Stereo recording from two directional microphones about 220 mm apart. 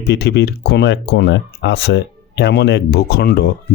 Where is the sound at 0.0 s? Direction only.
50° left (ahead or behind).